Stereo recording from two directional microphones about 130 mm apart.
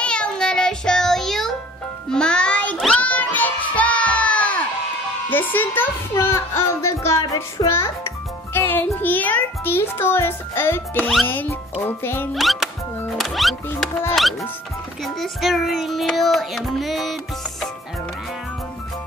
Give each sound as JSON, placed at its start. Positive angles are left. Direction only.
{"t": 0.0, "sound": "child singing", "side_deg": 5}
{"t": 2.0, "sound": "music", "side_deg": 5}
{"t": 5.3, "sound": "a child's voice", "side_deg": 15}
{"t": 12.4, "sound": "child singing", "side_deg": 0}
{"t": 15.1, "sound": "child singing", "side_deg": 0}